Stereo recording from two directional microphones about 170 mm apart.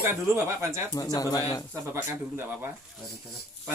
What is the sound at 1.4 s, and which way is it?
Speech, 35° left (ahead or behind).